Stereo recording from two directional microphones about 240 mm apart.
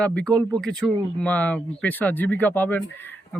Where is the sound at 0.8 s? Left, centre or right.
Centre.